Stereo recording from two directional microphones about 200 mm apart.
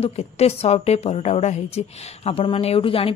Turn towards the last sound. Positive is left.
turn(degrees=30)  # may be behind; listen again after turning